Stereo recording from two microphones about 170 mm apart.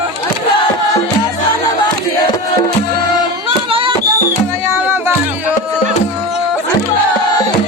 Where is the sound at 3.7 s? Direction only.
30° right (ahead or behind).